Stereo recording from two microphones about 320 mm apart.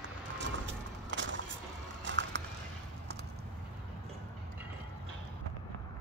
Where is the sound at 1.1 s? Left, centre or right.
Right.